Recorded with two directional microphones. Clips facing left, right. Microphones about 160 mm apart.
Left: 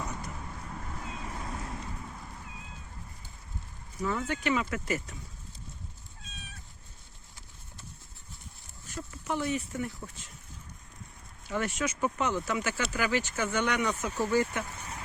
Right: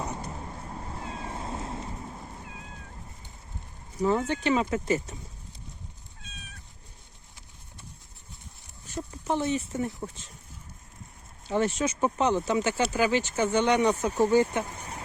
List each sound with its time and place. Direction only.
0.0 s cat: 25° right (ahead or behind)
4.3 s speech: 25° right (ahead or behind)
9.2 s speech: 25° right (ahead or behind)
11.4 s speech: 25° right (ahead or behind)